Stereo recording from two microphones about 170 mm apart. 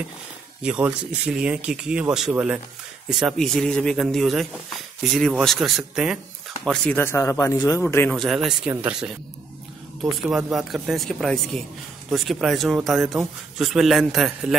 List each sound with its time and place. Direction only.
0.6 s speech: 5° right (ahead or behind); by 8.1 s 10° left (ahead or behind)
8.1 s speech: centre (ahead or behind)
10.3 s speech: centre (ahead or behind)